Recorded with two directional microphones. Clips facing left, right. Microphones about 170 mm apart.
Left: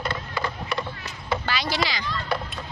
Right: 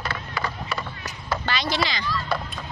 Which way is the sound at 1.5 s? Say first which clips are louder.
Right 3 dB; 10° left (ahead or behind).